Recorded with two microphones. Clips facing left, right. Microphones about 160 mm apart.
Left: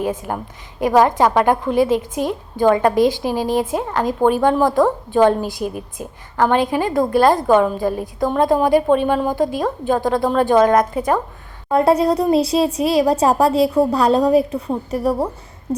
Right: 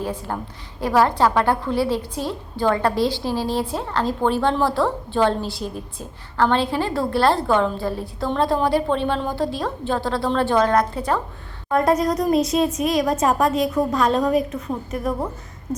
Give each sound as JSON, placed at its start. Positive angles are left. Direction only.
{"t": 0.3, "sound": "a woman's voice", "side_deg": 15}
{"t": 11.7, "sound": "speech", "side_deg": 30}